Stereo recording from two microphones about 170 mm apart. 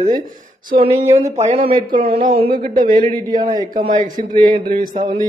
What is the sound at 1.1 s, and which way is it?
Speech, 40° right (ahead or behind).